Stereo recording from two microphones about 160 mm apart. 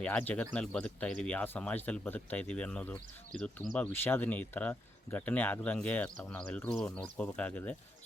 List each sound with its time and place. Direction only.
0.0 s speech: 10° left (ahead or behind)